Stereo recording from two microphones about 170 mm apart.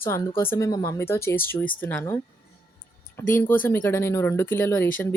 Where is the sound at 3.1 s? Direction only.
10° left (ahead or behind).